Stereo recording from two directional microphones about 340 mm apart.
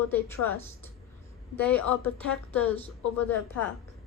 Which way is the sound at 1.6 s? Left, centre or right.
Centre.